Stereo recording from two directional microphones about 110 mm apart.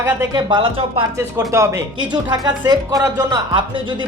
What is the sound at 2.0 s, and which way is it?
Speech, 45° right (ahead or behind).